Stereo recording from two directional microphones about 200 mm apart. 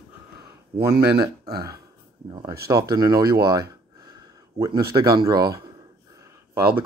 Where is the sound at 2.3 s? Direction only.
20° right (ahead or behind).